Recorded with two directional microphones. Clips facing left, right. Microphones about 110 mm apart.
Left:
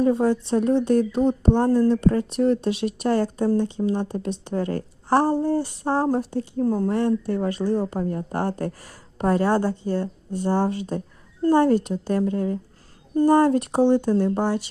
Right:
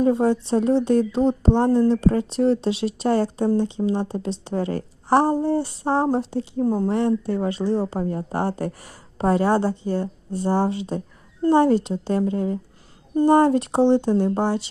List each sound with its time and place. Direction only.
0.0 s a woman's voice: 25° right (ahead or behind)